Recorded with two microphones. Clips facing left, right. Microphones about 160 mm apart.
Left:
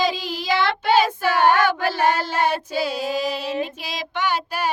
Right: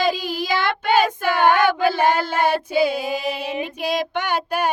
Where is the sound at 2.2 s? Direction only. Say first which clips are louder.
Right 2 dB; 55° right (ahead or behind).